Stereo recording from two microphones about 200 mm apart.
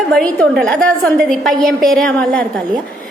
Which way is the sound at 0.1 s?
5° left (ahead or behind).